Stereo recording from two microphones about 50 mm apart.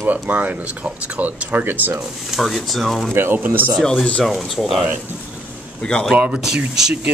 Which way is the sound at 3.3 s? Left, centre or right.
Right.